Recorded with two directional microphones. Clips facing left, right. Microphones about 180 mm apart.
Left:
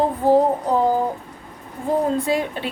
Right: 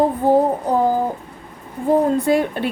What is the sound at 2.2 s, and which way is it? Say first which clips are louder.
Speech: right 5 dB; 50° right (ahead or behind).